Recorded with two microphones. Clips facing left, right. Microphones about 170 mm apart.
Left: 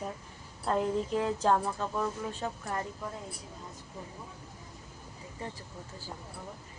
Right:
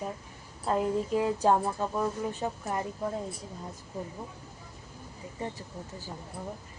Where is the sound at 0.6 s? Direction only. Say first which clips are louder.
Right 1 dB; 5° right (ahead or behind).